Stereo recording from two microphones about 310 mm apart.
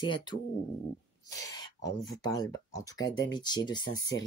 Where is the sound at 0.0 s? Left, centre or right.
Centre.